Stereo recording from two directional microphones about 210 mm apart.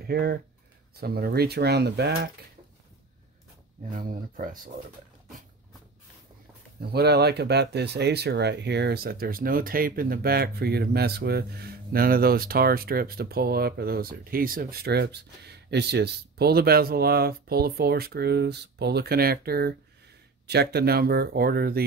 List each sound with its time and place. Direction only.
0.0 s speech: 50° right (ahead or behind)
3.9 s speech: 40° right (ahead or behind)
6.8 s speech: 50° right (ahead or behind)